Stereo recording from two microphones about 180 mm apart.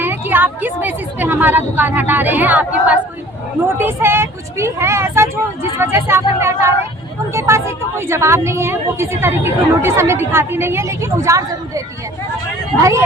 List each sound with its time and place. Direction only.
0.0 s a woman's voice: 10° right (ahead or behind)
12.8 s a woman's voice: 15° right (ahead or behind)